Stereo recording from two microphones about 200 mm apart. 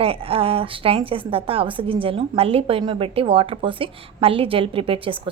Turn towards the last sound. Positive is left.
turn(degrees=-25)  # may be behind; listen again after turning